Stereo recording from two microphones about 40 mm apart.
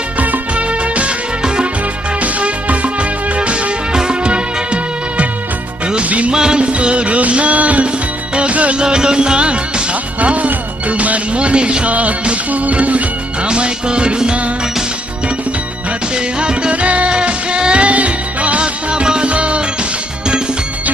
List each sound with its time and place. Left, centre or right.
0.2 s music: right
2.2 s music: right
6.3 s music: centre; by 7.9 s right
8.4 s music of bollywood: right
8.8 s music: right
13.5 s music: right
16.1 s music: right